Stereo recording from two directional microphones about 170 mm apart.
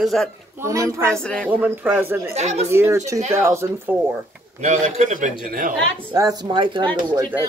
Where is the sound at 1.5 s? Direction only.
10° right (ahead or behind).